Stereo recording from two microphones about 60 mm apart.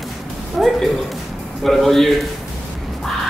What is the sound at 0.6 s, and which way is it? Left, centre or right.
A woman's voice, centre.